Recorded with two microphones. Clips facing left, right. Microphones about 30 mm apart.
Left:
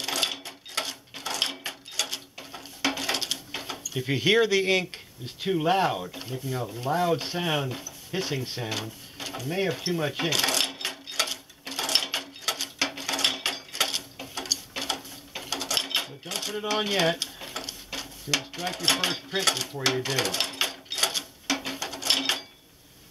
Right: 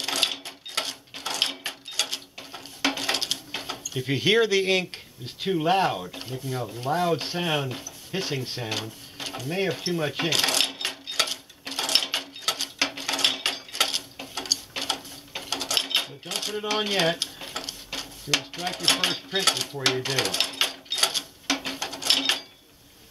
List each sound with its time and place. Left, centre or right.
0.0 s a sound: centre
3.8 s speech: centre
6.3 s speech: centre
6.8 s speech: centre
10.1 s cash register: centre
15.3 s mechanisms: centre
19.8 s a sound: centre